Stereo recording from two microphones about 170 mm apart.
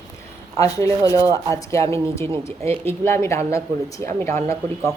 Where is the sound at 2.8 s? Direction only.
15° left (ahead or behind).